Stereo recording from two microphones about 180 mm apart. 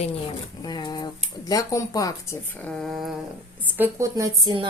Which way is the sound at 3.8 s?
15° right (ahead or behind).